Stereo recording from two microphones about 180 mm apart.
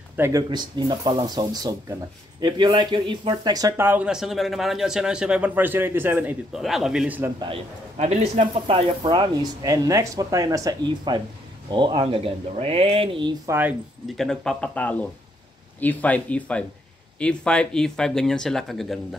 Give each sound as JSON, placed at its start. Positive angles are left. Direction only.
{"t": 0.2, "sound": "speech", "side_deg": -20}
{"t": 8.0, "sound": "speech", "side_deg": -40}
{"t": 13.6, "sound": "speech", "side_deg": -10}
{"t": 14.1, "sound": "speech", "side_deg": 5}